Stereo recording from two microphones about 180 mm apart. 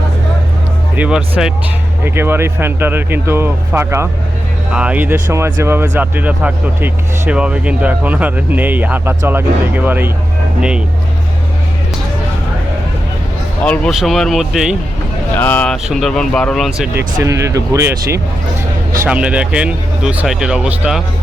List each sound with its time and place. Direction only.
0.9 s speech: 5° right (ahead or behind)
13.7 s speech: centre (ahead or behind)
15.4 s speech: 10° left (ahead or behind)
16.9 s speech: 15° right (ahead or behind)